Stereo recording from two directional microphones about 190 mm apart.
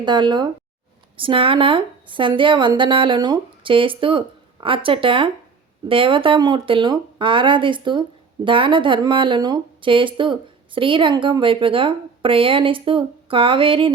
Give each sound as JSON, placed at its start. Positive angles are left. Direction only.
{"t": 0.0, "sound": "speech", "side_deg": -25}